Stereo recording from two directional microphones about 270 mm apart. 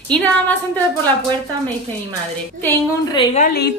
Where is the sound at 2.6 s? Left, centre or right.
Centre.